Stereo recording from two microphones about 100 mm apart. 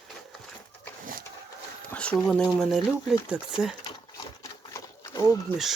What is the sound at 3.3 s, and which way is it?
Speech, 10° right (ahead or behind).